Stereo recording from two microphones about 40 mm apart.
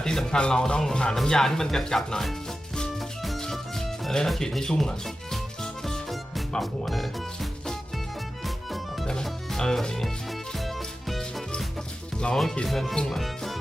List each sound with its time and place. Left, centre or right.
0.0 s speech: centre
3.4 s music: centre
4.4 s speech: centre
5.8 s music: centre
6.6 s speech: centre
8.4 s music: centre
12.3 s speech: centre
13.1 s music: centre